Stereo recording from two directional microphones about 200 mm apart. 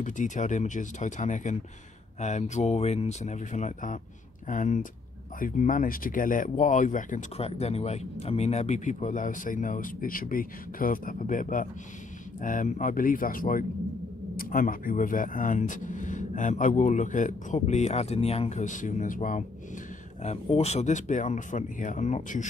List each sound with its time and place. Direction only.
0.0 s speech: 40° left (ahead or behind)